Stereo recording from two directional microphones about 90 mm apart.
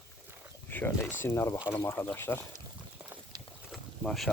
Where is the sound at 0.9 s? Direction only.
25° left (ahead or behind).